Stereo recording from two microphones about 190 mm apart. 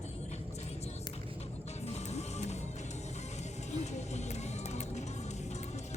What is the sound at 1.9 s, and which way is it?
Music, 35° left (ahead or behind).